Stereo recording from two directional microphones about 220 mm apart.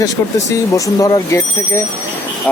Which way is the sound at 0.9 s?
15° left (ahead or behind).